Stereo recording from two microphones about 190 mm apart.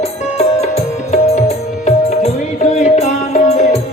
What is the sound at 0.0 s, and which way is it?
Music, 35° left (ahead or behind).